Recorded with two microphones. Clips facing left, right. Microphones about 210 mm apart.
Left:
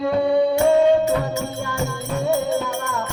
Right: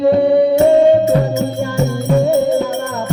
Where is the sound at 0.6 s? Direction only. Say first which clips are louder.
Right 4 dB; 35° right (ahead or behind).